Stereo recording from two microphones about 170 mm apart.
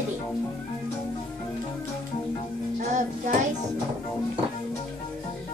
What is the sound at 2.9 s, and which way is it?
Child singing, 45° right (ahead or behind).